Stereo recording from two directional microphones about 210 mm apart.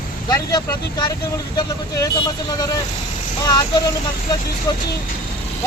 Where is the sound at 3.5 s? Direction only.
20° left (ahead or behind).